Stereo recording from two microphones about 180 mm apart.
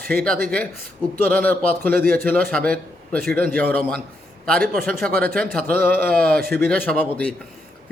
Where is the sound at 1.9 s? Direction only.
55° right (ahead or behind).